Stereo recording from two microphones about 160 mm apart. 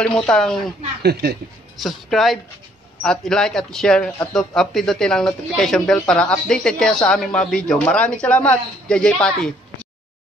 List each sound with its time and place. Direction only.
0.0 s speech: 5° left (ahead or behind)
1.0 s speech: 90° right
1.8 s speech: centre (ahead or behind)